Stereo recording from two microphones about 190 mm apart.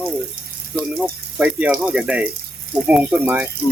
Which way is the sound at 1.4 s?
5° right (ahead or behind).